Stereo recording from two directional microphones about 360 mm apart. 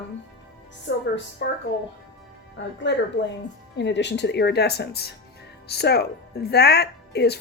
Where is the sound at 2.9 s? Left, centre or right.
Left.